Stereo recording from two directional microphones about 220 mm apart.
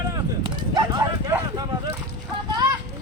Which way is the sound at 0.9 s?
20° right (ahead or behind).